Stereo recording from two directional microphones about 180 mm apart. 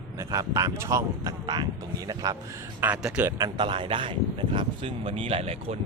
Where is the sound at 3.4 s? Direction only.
25° right (ahead or behind).